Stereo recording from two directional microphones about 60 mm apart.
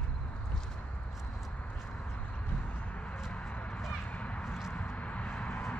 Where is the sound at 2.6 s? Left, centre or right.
Left.